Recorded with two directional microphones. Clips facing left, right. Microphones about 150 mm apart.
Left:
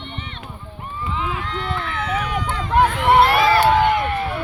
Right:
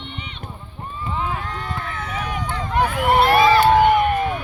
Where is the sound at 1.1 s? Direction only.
45° right (ahead or behind).